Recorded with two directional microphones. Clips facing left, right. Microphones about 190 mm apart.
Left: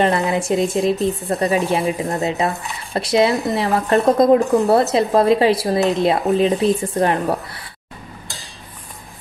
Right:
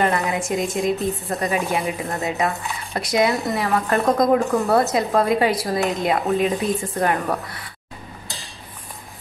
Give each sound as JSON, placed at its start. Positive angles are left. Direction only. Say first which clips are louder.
{"t": 0.0, "sound": "speech", "louder": "left 4 dB", "side_deg": 30}